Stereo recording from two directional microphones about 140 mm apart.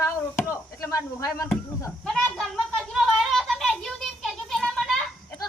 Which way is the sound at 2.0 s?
5° left (ahead or behind).